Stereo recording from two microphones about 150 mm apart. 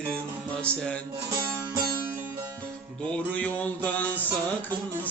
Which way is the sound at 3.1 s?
10° left (ahead or behind).